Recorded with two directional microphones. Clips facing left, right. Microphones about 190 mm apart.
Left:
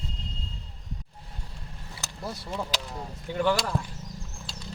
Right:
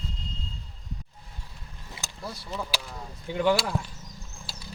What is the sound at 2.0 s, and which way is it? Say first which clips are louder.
Vehicle: left 1 dB; 20° right (ahead or behind).